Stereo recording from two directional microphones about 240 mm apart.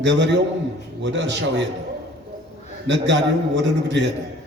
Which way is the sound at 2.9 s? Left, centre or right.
Right.